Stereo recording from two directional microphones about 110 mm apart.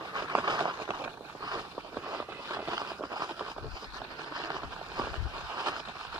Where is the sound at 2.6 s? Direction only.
35° right (ahead or behind).